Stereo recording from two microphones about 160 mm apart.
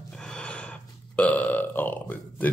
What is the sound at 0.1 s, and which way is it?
Burping, 5° left (ahead or behind).